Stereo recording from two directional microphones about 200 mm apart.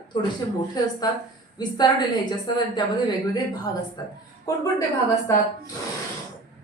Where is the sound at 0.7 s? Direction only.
20° left (ahead or behind).